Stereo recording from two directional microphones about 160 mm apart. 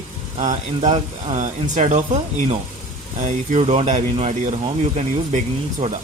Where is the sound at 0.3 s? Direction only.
45° right (ahead or behind).